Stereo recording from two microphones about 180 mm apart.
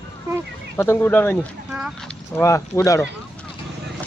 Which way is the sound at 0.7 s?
15° left (ahead or behind).